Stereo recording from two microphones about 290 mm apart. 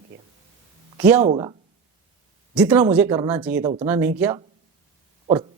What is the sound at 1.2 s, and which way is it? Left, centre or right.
Speech, centre.